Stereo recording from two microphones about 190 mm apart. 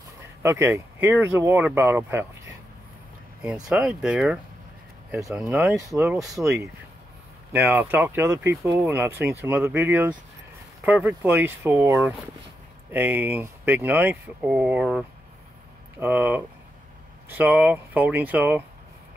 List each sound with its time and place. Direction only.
0.4 s speech: 15° right (ahead or behind)
5.9 s speech: 15° right (ahead or behind)
7.5 s speech: 10° right (ahead or behind)